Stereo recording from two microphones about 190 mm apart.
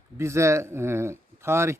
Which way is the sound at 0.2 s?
15° right (ahead or behind).